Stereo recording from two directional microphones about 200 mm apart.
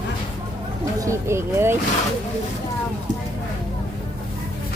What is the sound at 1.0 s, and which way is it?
Speech, 15° right (ahead or behind).